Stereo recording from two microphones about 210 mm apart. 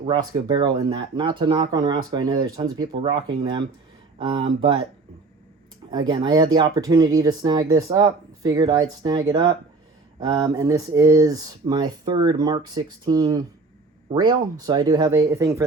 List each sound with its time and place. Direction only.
0.0 s speech: 20° right (ahead or behind)
5.9 s speech: 20° right (ahead or behind)